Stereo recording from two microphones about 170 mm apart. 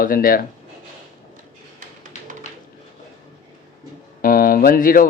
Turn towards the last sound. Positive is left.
turn(degrees=55)  # may be behind; listen again after turning